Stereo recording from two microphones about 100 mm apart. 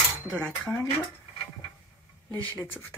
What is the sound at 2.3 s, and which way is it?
Speech, 15° left (ahead or behind).